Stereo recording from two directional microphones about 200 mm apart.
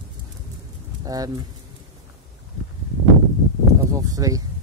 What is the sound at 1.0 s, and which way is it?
Speech, 20° right (ahead or behind).